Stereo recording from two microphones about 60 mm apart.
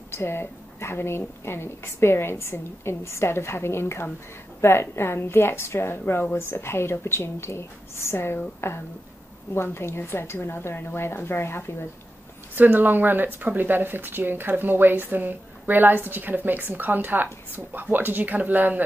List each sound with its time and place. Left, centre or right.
0.1 s a woman's voice: left
12.5 s speech: right